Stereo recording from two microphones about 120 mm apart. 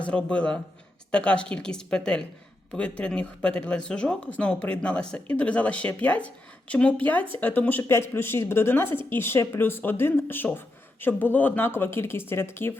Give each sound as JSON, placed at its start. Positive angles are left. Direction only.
{"t": 0.0, "sound": "speech", "side_deg": 10}